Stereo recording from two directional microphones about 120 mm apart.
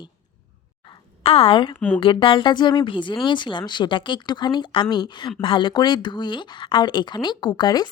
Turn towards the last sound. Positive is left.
turn(degrees=35)  # may be behind; listen again after turning